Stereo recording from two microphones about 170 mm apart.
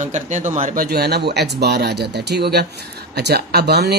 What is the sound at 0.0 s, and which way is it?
Speech, 45° right (ahead or behind).